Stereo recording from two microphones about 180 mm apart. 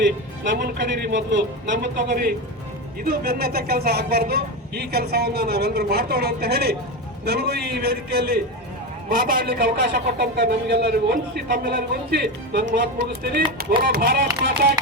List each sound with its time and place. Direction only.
0.5 s a man's voice: 70° right (ahead or behind)